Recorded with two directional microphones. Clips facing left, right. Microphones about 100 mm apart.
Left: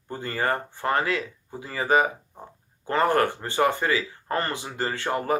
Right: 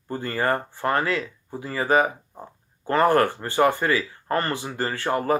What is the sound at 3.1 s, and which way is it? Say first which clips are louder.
Speech: right 3 dB; 20° left (ahead or behind).